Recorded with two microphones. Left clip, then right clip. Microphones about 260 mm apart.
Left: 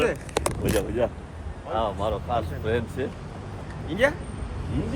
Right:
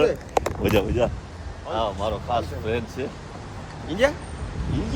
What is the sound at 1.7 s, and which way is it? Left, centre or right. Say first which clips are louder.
Speech: right 1 dB; centre.